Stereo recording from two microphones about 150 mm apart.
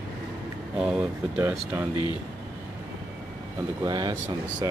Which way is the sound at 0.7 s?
5° right (ahead or behind).